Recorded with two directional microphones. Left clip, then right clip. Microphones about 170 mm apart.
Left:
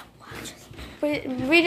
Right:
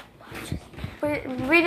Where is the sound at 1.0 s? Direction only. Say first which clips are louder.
Left 1 dB; 25° left (ahead or behind).